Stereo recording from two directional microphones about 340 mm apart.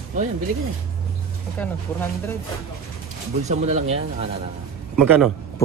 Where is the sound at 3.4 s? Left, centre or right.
Centre.